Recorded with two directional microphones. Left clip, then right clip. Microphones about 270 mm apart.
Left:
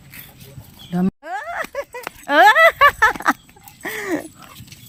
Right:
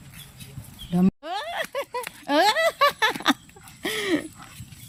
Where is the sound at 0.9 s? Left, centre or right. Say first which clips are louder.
Left 2 dB; centre.